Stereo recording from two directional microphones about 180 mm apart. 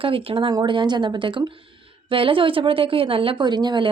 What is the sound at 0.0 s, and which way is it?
A woman's voice, 30° right (ahead or behind).